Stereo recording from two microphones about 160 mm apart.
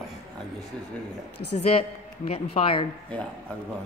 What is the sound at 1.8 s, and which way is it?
A man's voice, 40° left (ahead or behind).